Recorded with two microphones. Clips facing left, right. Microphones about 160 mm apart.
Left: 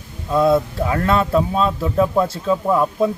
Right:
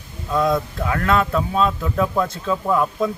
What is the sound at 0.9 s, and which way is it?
Speech, 30° left (ahead or behind).